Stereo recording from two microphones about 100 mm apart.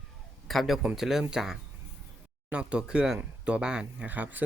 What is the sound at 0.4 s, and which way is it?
A man's voice, centre (ahead or behind).